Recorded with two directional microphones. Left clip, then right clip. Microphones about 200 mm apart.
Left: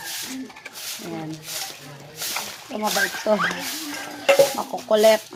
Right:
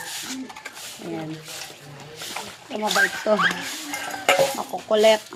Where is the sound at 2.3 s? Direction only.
5° left (ahead or behind).